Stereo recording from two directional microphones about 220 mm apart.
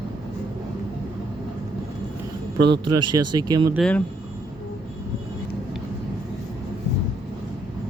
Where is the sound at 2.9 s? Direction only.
90° right.